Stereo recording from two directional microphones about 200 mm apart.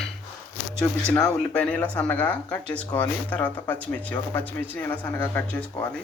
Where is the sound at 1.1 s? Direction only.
10° left (ahead or behind).